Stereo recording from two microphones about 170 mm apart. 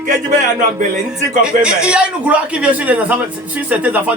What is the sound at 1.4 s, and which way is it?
A man's voice, 5° right (ahead or behind).